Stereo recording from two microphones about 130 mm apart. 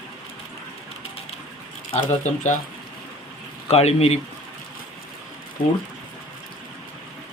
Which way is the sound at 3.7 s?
50° left (ahead or behind).